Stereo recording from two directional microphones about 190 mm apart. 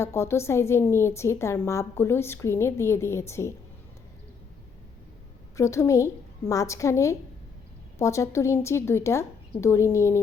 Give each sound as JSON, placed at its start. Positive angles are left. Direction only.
{"t": 0.0, "sound": "a woman's voice", "side_deg": 15}
{"t": 5.5, "sound": "a woman's voice", "side_deg": 15}